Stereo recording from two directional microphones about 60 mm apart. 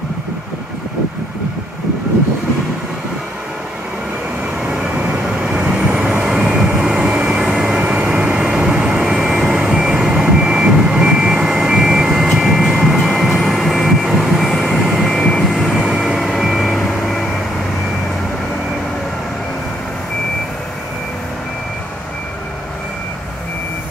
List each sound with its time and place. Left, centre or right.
4.6 s vehicle: centre
7.8 s vehicle: right; by 15.0 s centre
15.0 s vehicle: centre
15.8 s vehicle: centre
16.2 s vehicle: centre